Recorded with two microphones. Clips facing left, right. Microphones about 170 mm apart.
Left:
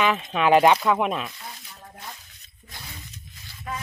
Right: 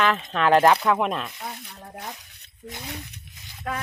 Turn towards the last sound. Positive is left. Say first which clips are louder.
# right 3 dB
turn(degrees=-85)